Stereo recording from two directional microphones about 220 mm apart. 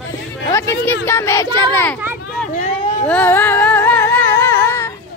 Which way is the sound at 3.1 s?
10° left (ahead or behind).